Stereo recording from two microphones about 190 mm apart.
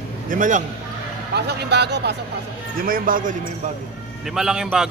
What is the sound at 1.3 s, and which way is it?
Speech, 60° right (ahead or behind).